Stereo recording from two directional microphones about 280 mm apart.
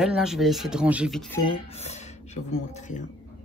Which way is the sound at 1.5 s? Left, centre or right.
Left.